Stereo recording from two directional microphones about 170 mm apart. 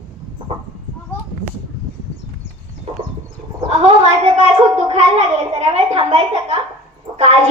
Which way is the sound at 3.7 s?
40° right (ahead or behind).